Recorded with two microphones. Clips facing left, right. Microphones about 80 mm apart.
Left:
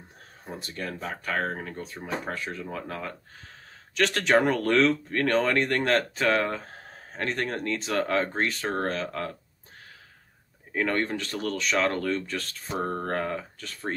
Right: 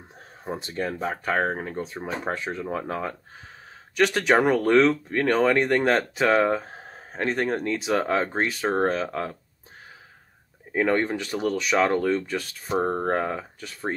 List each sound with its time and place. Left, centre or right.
0.5 s speech: right
3.9 s speech: centre
10.7 s speech: centre